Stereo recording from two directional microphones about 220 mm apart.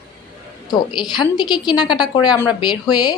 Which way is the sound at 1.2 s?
20° left (ahead or behind).